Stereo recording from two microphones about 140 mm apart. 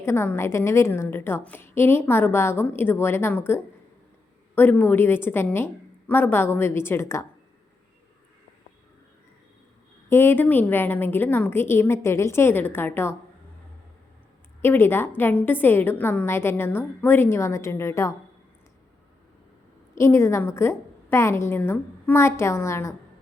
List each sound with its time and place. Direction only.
0.0 s a woman's voice: 15° left (ahead or behind)
10.1 s a woman's voice: 15° left (ahead or behind)
14.6 s a woman's voice: 15° left (ahead or behind)
20.0 s a woman's voice: 20° left (ahead or behind)